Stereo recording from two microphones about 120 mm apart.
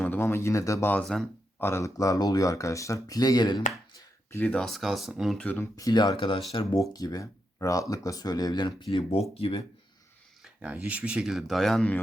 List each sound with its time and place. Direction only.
0.0 s speech: 20° left (ahead or behind)
1.0 s speech: 5° left (ahead or behind)
1.5 s speech: 20° left (ahead or behind); by 3.6 s 35° left (ahead or behind)
3.9 s a sound: 20° left (ahead or behind)
4.4 s speech: 5° left (ahead or behind)
5.4 s speech: 15° left (ahead or behind)
5.7 s speech: 35° left (ahead or behind)
6.7 s speech: 30° left (ahead or behind); by 9.6 s 50° left (ahead or behind)
10.4 s speech: 10° right (ahead or behind); by 11.9 s 5° left (ahead or behind)